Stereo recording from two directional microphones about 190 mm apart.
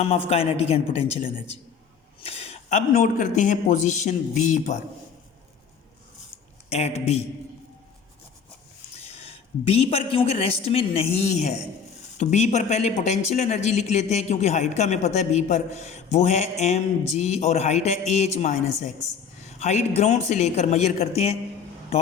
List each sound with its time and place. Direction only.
0.0 s speech: 30° left (ahead or behind)
2.2 s speech: 30° left (ahead or behind)
6.7 s speech: 35° left (ahead or behind)
9.0 s a man's voice: 30° left (ahead or behind)